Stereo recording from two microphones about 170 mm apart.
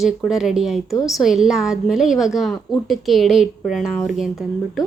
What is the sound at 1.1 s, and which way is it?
A woman's voice, centre (ahead or behind).